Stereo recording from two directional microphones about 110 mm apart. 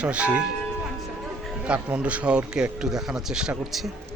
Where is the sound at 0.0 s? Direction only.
10° right (ahead or behind).